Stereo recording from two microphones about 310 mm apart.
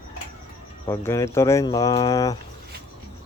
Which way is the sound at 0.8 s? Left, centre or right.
Centre.